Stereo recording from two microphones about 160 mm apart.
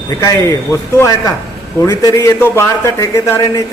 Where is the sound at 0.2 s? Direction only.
15° left (ahead or behind).